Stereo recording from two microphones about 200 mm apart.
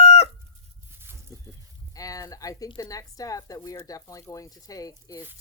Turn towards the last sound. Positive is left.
turn(degrees=15)  # may be behind; listen again after turning